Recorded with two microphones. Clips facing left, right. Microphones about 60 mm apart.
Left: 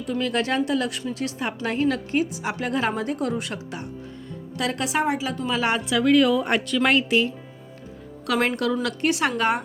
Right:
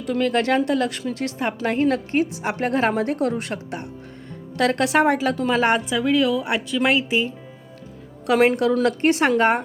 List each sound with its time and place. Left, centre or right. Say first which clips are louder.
0.2 s a woman's voice: right 4 dB; right
4.5 s a woman's voice: right 6 dB; right
5.5 s a woman's voice: right 4 dB; right
6.0 s a woman's voice: left 2 dB; centre
8.4 s a woman's voice: right 6 dB; centre
8.8 s a woman's voice: right 5 dB; right